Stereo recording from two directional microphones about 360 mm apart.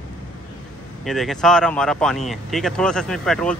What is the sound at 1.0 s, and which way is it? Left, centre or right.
Speech, centre.